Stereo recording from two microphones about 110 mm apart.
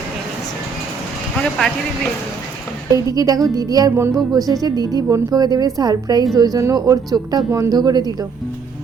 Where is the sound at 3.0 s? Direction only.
35° right (ahead or behind).